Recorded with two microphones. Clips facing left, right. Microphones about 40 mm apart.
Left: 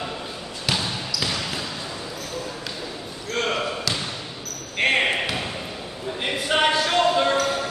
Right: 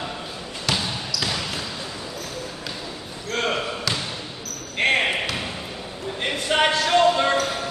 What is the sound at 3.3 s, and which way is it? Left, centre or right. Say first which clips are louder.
Basketball bounce: even; centre.